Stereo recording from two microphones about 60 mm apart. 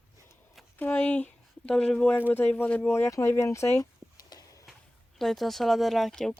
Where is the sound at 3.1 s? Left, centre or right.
Left.